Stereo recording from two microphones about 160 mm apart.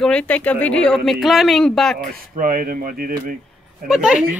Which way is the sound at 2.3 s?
60° right (ahead or behind).